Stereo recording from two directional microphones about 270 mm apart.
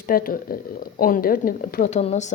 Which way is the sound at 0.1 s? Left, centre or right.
Left.